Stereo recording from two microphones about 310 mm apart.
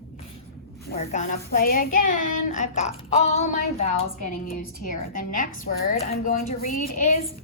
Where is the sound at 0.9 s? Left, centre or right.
Left.